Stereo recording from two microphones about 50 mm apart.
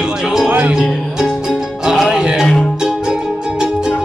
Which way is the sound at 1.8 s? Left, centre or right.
Centre.